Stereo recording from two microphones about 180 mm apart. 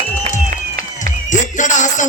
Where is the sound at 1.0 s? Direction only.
45° left (ahead or behind).